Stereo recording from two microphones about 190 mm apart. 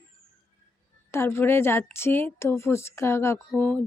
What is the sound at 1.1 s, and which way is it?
Speech, 15° left (ahead or behind).